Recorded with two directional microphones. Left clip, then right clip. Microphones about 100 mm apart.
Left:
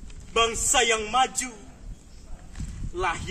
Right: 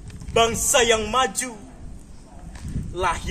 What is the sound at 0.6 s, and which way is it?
Speech, 20° left (ahead or behind).